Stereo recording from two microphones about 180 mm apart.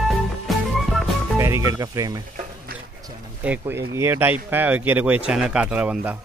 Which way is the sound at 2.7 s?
55° right (ahead or behind).